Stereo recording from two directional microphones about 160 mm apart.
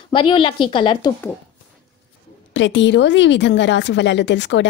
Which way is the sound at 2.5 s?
90° left.